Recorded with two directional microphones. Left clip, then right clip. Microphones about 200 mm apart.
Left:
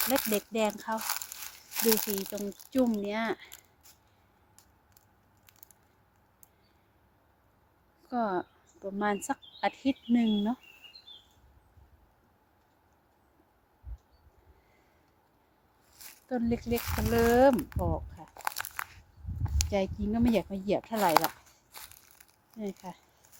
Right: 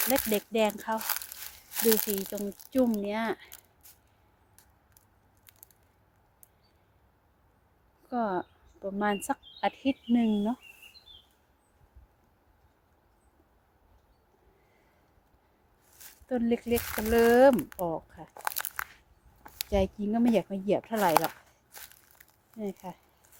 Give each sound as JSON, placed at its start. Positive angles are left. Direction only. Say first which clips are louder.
{"t": 0.0, "sound": "speech", "louder": "right 1 dB", "side_deg": -10}
{"t": 8.0, "sound": "speech", "louder": "even", "side_deg": 0}
{"t": 16.3, "sound": "speech", "louder": "right 3 dB", "side_deg": -15}
{"t": 20.9, "sound": "crumpling", "louder": "left 1 dB", "side_deg": 0}
{"t": 22.6, "sound": "speech", "louder": "right 2 dB", "side_deg": -5}